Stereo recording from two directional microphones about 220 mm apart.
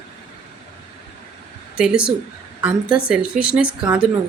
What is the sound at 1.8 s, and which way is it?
Speech, 5° right (ahead or behind).